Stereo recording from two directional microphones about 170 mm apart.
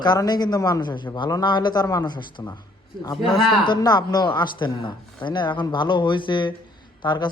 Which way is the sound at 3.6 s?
25° left (ahead or behind).